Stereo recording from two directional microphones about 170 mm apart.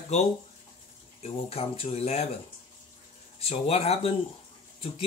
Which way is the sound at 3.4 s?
35° left (ahead or behind).